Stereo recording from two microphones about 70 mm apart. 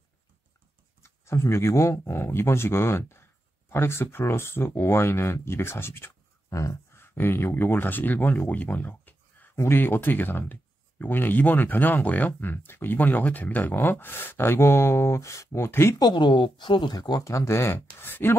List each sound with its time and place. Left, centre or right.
1.0 s speech: left
6.5 s speech: left
16.0 s speech: left
17.2 s speech: left